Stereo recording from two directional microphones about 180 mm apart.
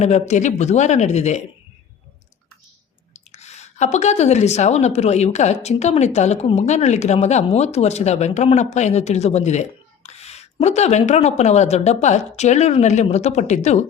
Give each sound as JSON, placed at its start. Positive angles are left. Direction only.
{"t": 0.0, "sound": "a woman's voice", "side_deg": 40}
{"t": 3.1, "sound": "a woman's voice", "side_deg": 40}